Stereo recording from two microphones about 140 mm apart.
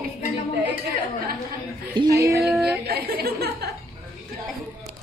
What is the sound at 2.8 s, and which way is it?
Speech, 90° right.